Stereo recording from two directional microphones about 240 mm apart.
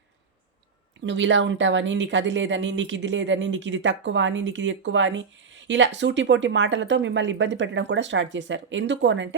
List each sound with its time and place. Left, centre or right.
1.0 s speech: right